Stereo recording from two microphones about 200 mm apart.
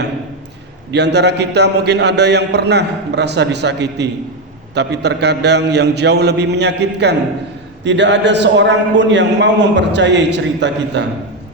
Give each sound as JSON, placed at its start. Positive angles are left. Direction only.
{"t": 0.9, "sound": "a man's voice", "side_deg": -60}